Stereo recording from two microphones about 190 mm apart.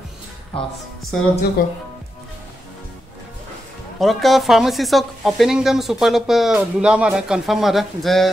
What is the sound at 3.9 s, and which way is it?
Speech, centre (ahead or behind).